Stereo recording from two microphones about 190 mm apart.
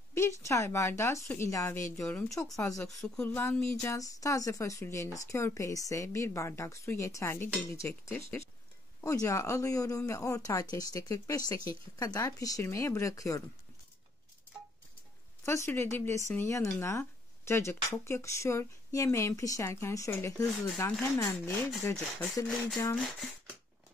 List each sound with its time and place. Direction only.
0.1 s speech: 15° left (ahead or behind)
2.0 s speech: 5° left (ahead or behind)
2.4 s speech: 15° left (ahead or behind)
15.4 s speech: 15° left (ahead or behind)
22.9 s speech: centre (ahead or behind)